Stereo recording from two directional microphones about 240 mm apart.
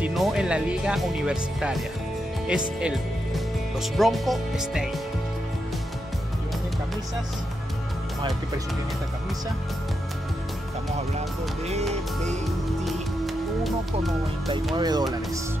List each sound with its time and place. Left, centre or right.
0.0 s speech: centre
14.8 s speech: centre